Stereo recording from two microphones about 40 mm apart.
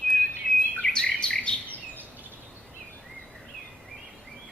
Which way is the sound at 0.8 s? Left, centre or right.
Left.